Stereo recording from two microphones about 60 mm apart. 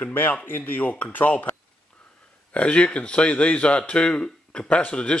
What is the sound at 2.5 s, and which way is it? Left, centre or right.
Speech, centre.